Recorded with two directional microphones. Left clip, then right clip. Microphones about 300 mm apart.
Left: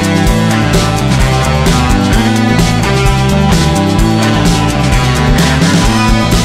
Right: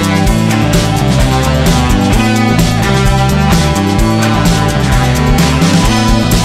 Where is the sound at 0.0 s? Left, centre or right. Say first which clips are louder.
Left 1 dB; centre.